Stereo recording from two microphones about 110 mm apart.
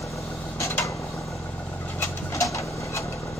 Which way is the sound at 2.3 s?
30° left (ahead or behind).